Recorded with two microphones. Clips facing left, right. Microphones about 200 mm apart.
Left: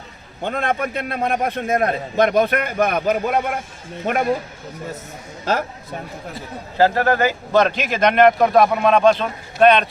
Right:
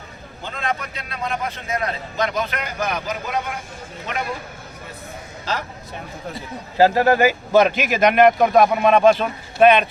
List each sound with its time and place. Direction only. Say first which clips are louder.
0.4 s a man's voice: left 6 dB; 55° left (ahead or behind)
5.5 s speech: left 6 dB; 55° left (ahead or behind)
6.7 s speech: right 1 dB; 15° right (ahead or behind)